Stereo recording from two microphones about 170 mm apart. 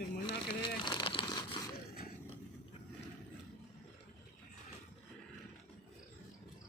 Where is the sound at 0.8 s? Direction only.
25° left (ahead or behind).